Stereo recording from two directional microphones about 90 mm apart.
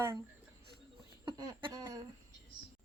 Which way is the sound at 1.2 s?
55° right (ahead or behind).